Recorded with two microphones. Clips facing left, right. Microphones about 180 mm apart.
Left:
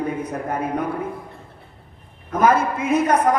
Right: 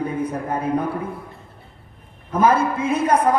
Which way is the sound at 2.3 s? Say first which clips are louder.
Even; 30° right (ahead or behind).